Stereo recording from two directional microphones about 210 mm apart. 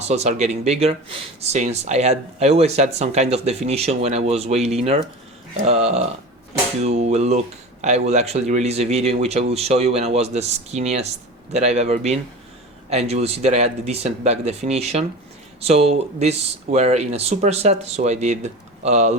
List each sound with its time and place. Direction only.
0.1 s speech: 30° right (ahead or behind)